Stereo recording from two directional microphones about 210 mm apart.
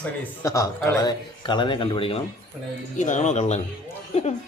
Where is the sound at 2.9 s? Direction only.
35° left (ahead or behind).